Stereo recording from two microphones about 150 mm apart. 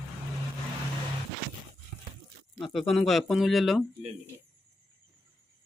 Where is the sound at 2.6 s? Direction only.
Centre (ahead or behind).